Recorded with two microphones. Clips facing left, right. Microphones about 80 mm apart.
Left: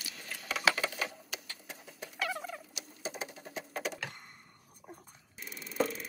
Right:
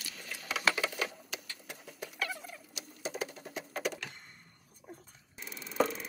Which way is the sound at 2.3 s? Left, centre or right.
Left.